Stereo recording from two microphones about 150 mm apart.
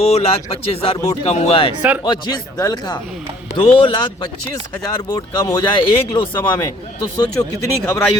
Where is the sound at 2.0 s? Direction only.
30° left (ahead or behind).